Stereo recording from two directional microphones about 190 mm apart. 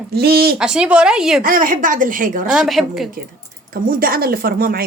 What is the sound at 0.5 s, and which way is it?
Speech, 5° right (ahead or behind).